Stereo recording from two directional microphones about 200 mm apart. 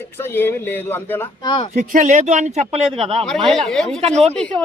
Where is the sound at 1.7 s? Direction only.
35° right (ahead or behind).